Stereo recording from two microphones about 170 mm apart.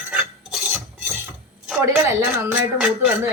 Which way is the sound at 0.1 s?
5° right (ahead or behind).